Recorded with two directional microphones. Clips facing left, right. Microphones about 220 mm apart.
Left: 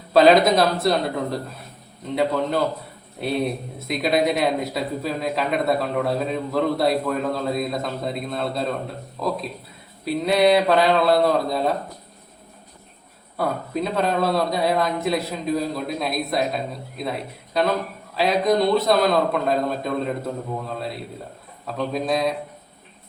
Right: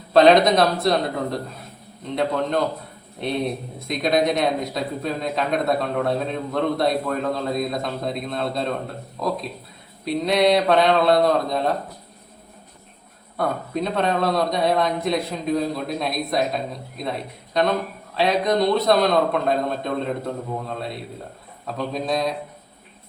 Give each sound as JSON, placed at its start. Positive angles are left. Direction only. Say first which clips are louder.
{"t": 0.1, "sound": "speech", "louder": "even", "side_deg": 0}
{"t": 13.3, "sound": "speech", "louder": "even", "side_deg": 5}